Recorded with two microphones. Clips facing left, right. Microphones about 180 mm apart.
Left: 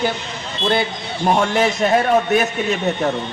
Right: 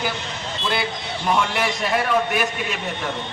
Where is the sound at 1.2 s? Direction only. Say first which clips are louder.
Left 5 dB; 40° left (ahead or behind).